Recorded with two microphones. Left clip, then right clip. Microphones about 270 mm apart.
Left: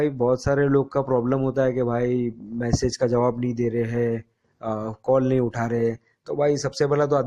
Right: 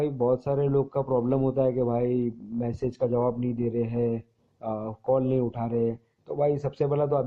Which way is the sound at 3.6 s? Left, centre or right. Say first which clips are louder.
Left 4 dB; left.